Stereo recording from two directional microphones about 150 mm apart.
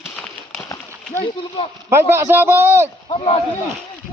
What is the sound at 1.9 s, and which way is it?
A man's voice, 15° right (ahead or behind).